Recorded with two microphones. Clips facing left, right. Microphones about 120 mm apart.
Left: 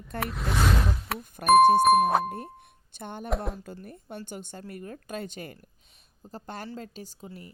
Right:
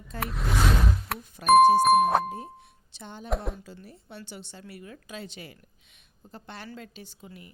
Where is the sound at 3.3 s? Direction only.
Centre (ahead or behind).